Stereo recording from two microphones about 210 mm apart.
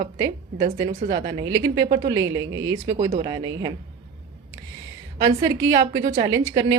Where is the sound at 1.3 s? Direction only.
20° right (ahead or behind).